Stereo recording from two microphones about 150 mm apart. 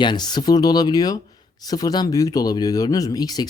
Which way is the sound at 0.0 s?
30° left (ahead or behind).